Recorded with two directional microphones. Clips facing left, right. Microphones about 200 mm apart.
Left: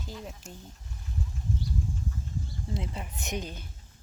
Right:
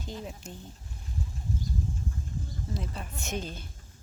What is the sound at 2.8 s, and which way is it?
Speech, 20° left (ahead or behind).